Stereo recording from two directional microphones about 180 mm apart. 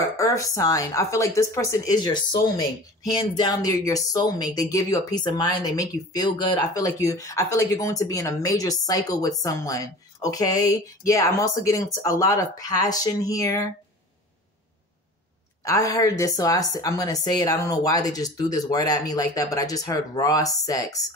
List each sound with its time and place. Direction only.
0.2 s a woman's voice: 20° left (ahead or behind)
15.6 s a woman's voice: 20° left (ahead or behind)